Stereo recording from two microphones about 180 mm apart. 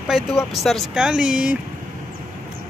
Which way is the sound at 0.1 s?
Centre (ahead or behind).